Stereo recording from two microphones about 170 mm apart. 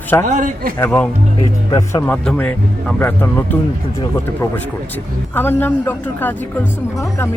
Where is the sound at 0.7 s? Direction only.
10° left (ahead or behind).